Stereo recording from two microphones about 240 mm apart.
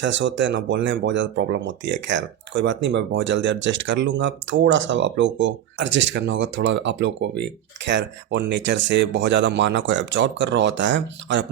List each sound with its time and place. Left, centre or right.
0.0 s speech: right